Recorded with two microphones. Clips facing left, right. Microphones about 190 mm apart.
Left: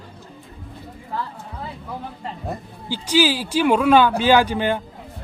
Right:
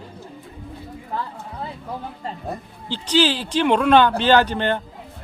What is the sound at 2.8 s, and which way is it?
Speech, 10° left (ahead or behind).